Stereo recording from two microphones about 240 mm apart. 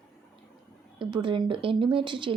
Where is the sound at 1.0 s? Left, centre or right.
Centre.